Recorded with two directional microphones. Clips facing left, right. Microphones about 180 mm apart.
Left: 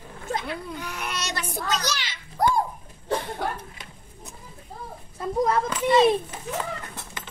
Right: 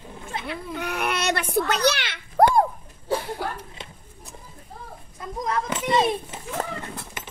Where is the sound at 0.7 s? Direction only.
65° right (ahead or behind).